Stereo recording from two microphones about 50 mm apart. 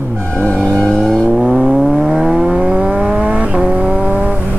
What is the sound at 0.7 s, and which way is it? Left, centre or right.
Vehicle, centre.